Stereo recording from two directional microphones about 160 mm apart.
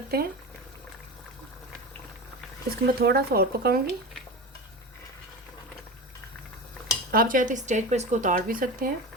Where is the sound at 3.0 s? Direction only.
75° right (ahead or behind).